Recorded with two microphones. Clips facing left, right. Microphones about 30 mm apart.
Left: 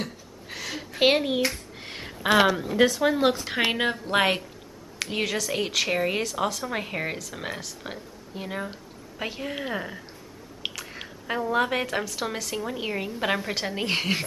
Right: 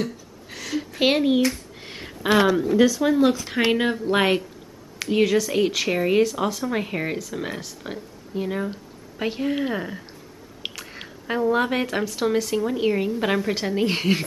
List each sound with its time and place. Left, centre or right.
0.0 s a sound: centre
2.8 s speech: left
3.5 s speech: centre